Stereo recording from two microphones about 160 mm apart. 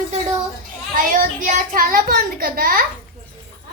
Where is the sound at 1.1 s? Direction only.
55° right (ahead or behind).